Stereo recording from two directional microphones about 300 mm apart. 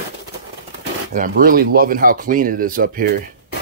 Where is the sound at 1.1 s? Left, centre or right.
Right.